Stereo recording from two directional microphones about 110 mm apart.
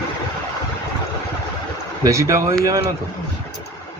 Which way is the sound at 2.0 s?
30° right (ahead or behind).